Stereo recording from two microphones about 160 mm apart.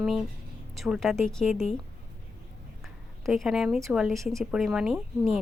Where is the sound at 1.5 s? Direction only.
45° left (ahead or behind).